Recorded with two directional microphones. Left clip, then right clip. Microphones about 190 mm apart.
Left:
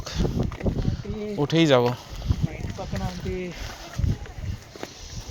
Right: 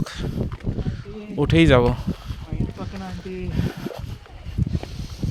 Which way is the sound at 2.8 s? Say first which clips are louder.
Left 2 dB; 45° right (ahead or behind).